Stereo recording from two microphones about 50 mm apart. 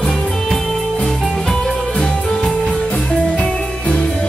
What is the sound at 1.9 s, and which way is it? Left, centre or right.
Music, centre.